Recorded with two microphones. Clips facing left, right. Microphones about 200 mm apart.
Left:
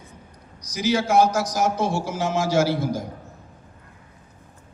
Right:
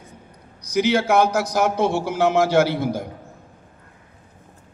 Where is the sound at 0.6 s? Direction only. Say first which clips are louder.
Right 4 dB; 60° right (ahead or behind).